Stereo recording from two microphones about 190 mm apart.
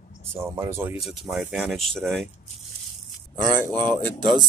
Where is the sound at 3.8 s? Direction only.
25° right (ahead or behind).